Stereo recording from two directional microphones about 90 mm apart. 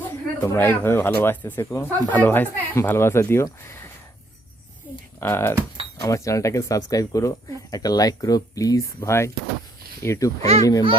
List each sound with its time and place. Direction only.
0.0 s speech: 25° left (ahead or behind)
5.2 s speech: 25° left (ahead or behind)
6.0 s speech: 35° left (ahead or behind)